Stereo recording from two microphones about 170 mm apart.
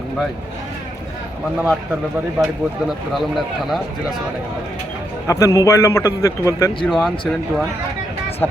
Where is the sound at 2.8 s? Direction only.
Centre (ahead or behind).